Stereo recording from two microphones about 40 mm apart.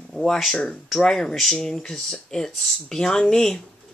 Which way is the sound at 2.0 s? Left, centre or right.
Centre.